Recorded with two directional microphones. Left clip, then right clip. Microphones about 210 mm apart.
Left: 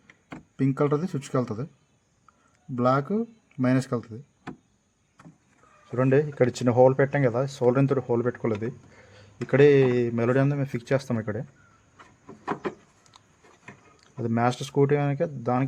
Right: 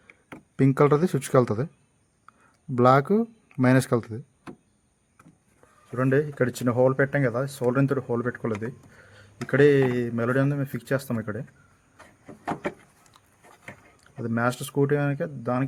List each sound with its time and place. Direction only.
0.5 s speech: 40° right (ahead or behind)
2.7 s speech: 35° right (ahead or behind)
6.0 s speech: 10° left (ahead or behind)
14.0 s speech: 15° left (ahead or behind)